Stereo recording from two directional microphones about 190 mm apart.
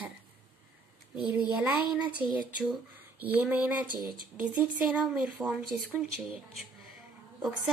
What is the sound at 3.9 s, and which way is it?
Speech, 25° left (ahead or behind).